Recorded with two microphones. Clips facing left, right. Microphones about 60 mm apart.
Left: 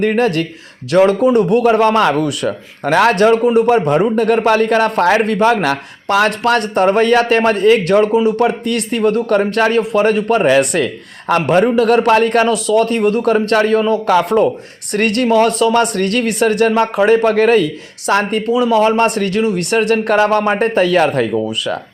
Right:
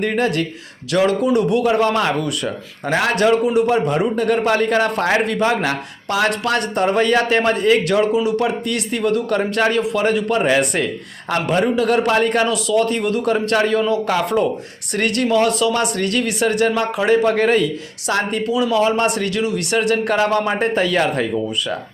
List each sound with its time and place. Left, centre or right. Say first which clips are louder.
0.0 s speech: left 4 dB; left
3.2 s speech: left 4 dB; left
11.3 s speech: left 6 dB; left